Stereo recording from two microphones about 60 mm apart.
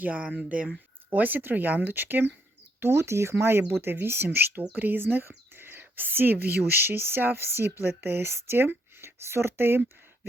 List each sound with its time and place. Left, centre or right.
0.0 s speech: right
1.1 s speech: right
2.8 s speech: right
5.5 s whispering: right
6.7 s speech: right